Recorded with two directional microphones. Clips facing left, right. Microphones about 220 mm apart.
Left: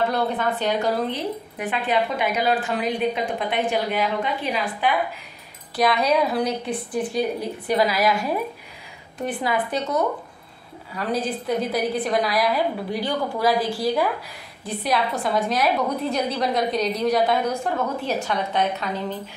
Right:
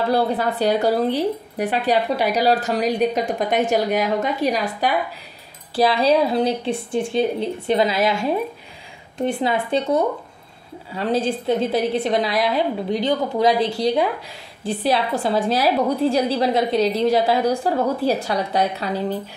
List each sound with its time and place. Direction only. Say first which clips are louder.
0.1 s a woman's voice: right 4 dB; 35° right (ahead or behind)
5.8 s a woman's voice: right 3 dB; 30° right (ahead or behind)